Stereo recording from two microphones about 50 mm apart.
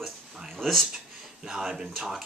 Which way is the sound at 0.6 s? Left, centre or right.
Centre.